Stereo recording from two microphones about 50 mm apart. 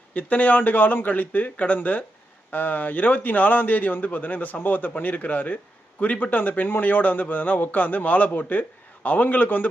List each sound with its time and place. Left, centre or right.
0.1 s a man's voice: left